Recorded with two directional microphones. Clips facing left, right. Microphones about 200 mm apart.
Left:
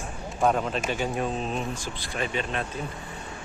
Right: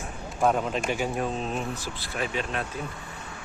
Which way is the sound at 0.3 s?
Centre (ahead or behind).